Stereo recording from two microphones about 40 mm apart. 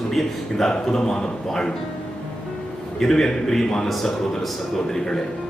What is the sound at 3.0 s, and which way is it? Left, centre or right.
Speech, centre.